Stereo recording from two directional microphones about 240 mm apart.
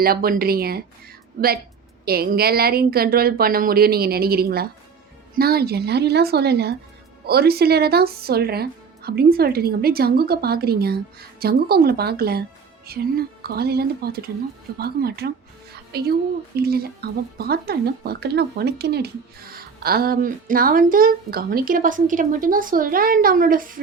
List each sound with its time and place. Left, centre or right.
0.0 s a woman's voice: right